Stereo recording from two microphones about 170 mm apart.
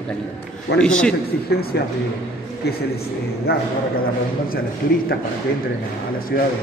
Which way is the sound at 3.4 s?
65° left (ahead or behind).